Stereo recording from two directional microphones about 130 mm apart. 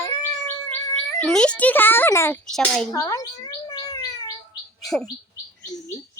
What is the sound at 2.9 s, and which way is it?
Chirp, 25° left (ahead or behind).